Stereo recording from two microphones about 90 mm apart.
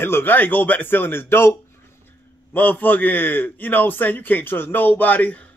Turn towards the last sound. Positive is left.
turn(degrees=15)  # may be behind; listen again after turning